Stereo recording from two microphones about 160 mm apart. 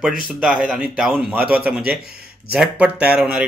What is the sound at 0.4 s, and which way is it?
A man's voice, 5° right (ahead or behind).